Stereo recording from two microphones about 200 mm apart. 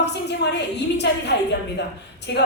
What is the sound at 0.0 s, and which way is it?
A woman's voice, 60° left (ahead or behind).